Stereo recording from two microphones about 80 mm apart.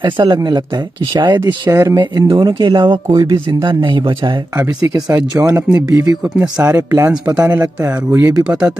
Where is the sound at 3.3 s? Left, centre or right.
Right.